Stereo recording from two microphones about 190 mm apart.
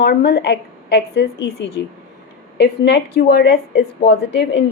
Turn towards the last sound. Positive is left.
turn(degrees=65)  # may be behind; listen again after turning